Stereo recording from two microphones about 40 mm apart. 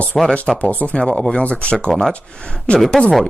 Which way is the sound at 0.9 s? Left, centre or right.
Left.